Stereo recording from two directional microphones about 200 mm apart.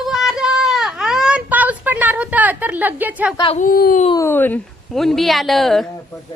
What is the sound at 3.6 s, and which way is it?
Speech, 45° left (ahead or behind).